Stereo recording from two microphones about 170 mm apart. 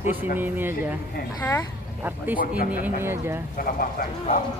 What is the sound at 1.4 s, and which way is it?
Speech, 15° left (ahead or behind).